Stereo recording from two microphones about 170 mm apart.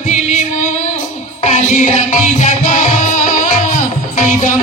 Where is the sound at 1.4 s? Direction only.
45° left (ahead or behind).